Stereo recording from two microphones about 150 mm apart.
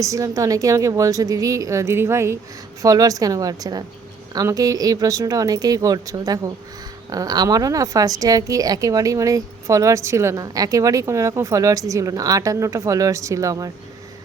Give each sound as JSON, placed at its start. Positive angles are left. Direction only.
{"t": 0.0, "sound": "a woman's voice", "side_deg": -20}